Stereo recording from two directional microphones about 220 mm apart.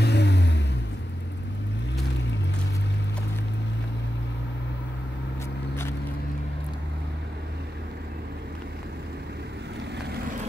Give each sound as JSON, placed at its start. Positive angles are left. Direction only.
{"t": 0.0, "sound": "vehicle", "side_deg": 50}